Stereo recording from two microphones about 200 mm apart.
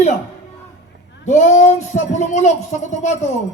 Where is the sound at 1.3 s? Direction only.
35° left (ahead or behind).